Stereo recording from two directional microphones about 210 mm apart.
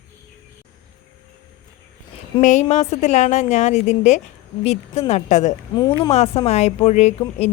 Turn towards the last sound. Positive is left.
turn(degrees=30)  # may be behind; listen again after turning